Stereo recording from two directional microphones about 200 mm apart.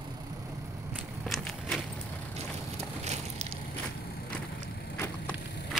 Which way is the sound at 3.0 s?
35° right (ahead or behind).